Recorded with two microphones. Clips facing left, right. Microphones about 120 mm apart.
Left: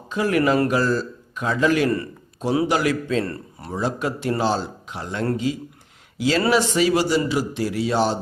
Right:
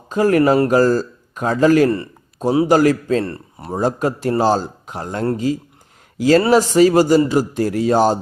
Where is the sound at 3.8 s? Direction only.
40° right (ahead or behind).